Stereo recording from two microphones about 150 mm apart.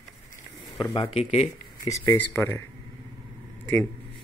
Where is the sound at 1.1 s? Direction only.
45° left (ahead or behind).